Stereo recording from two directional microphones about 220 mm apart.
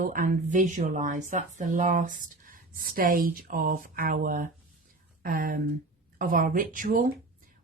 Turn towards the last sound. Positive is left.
turn(degrees=-40)  # may be behind; listen again after turning